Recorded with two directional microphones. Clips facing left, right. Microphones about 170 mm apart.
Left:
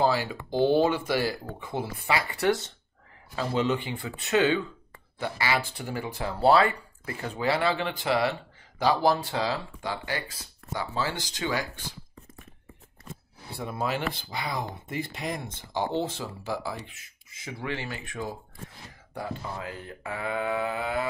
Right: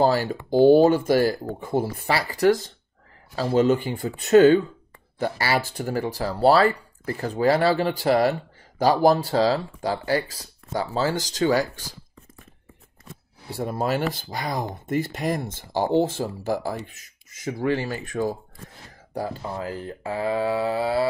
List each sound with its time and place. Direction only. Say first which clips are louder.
0.0 s speech: right 5 dB; 45° right (ahead or behind)
13.6 s speech: right 6 dB; 45° right (ahead or behind)